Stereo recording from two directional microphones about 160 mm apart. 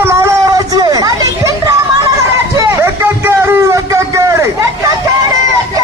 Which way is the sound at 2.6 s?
15° right (ahead or behind).